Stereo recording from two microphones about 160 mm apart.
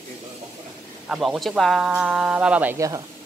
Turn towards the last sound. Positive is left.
turn(degrees=-20)  # may be behind; listen again after turning